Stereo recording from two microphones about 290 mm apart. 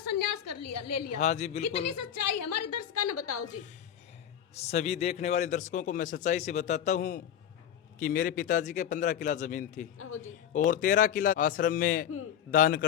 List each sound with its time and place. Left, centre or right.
0.2 s a sound: left
1.2 s a man's voice: left
1.6 s a woman's voice: left
4.5 s a man's voice: left
10.0 s speech: left
10.7 s a man's voice: left